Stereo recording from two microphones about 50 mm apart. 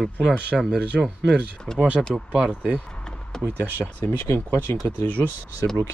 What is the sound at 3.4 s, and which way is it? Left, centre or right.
Speech, right.